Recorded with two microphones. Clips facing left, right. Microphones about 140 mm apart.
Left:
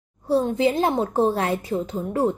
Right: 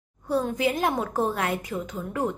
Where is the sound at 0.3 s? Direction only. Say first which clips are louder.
Left 5 dB; 30° left (ahead or behind).